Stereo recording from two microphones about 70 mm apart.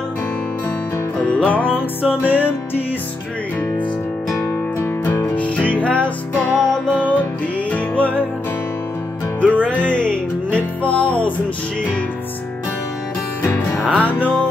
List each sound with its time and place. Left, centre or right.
1.2 s music: centre
4.4 s music: left
5.3 s music: centre
6.6 s music: centre
7.7 s music: left
9.4 s music: right
9.8 s music: centre
13.4 s music: left